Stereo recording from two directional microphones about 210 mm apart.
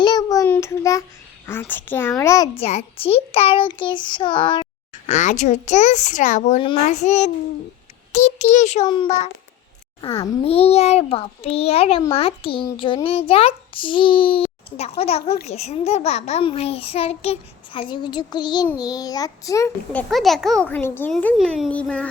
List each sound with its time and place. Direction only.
0.0 s child singing: 20° left (ahead or behind)
1.5 s a child's voice: 10° left (ahead or behind)
2.6 s a child's voice: 30° left (ahead or behind)
5.0 s a child's voice: 35° left (ahead or behind); by 22.1 s 5° left (ahead or behind)